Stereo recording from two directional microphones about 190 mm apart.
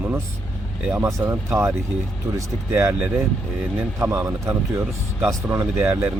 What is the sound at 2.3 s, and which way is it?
Speech, 15° right (ahead or behind).